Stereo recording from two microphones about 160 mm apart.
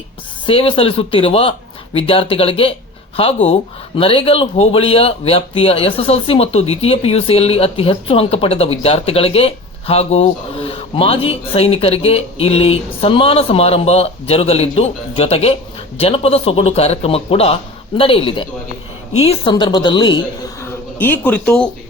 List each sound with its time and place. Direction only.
0.4 s a man's voice: 35° left (ahead or behind)
20.6 s speech: 10° left (ahead or behind)